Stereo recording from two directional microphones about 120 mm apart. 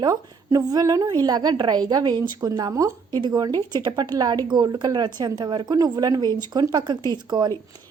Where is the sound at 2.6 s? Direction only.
30° right (ahead or behind).